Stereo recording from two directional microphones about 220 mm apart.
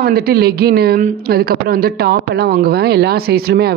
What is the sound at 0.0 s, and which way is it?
A man's voice, 45° right (ahead or behind).